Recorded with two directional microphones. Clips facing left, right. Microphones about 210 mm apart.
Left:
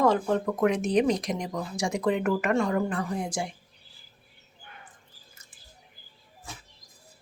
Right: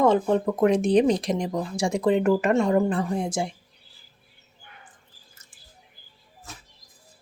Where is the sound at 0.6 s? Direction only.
30° right (ahead or behind).